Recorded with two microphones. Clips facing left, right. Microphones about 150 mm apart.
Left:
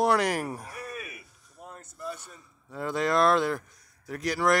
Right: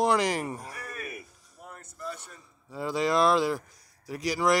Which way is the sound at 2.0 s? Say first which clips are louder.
Left 1 dB; 10° left (ahead or behind).